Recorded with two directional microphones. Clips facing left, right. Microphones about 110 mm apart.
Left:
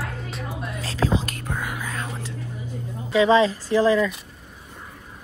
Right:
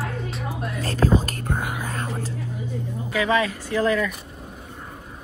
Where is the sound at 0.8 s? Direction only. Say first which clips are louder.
Right 3 dB; 50° right (ahead or behind).